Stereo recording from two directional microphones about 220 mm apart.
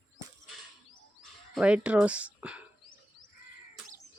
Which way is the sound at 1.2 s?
5° right (ahead or behind).